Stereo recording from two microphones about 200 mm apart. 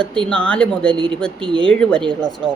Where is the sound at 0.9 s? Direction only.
25° right (ahead or behind).